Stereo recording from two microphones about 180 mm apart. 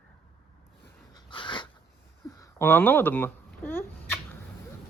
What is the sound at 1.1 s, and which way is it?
Dog, 25° left (ahead or behind).